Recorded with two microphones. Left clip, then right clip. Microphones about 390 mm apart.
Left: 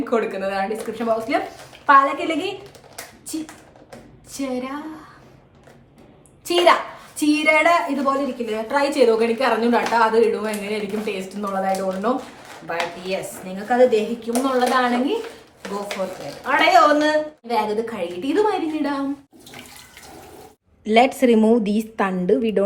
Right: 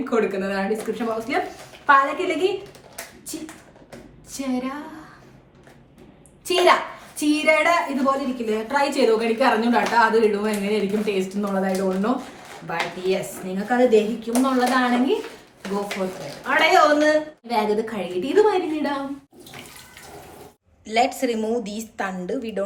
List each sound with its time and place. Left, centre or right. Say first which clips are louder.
0.0 s a woman's voice: left 1 dB; centre
2.9 s a sound: left 5 dB; centre
4.3 s a woman's voice: left 1 dB; centre
6.4 s a child's voice: left 1 dB; centre
16.4 s a woman's voice: left 2 dB; centre
20.8 s a woman's voice: left 5 dB; centre